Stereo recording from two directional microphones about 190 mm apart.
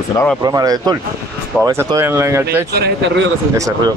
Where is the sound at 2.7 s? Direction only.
55° right (ahead or behind).